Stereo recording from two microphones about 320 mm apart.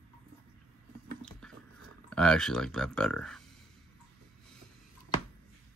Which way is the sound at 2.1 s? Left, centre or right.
Centre.